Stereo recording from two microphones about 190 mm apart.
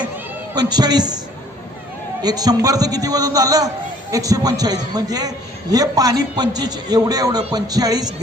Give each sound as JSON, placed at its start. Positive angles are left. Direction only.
{"t": 0.5, "sound": "a man's voice", "side_deg": -20}
{"t": 2.2, "sound": "a man's voice", "side_deg": -20}